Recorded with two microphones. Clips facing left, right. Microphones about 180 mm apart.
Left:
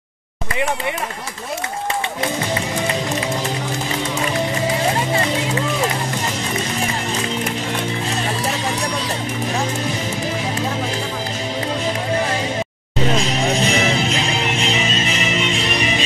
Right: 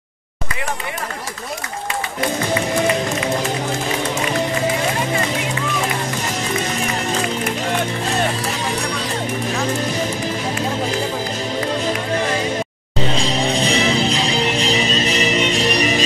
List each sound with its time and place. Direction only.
13.1 s music: 30° right (ahead or behind)